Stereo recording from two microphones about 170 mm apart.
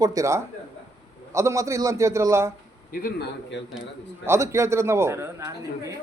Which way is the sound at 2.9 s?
70° left (ahead or behind).